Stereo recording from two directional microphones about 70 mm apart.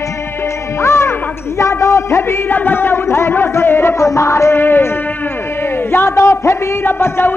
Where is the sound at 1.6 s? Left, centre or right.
Left.